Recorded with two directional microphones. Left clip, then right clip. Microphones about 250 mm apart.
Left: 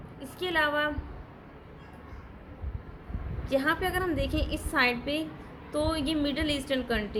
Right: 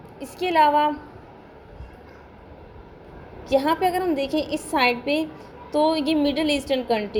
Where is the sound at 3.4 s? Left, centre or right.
Centre.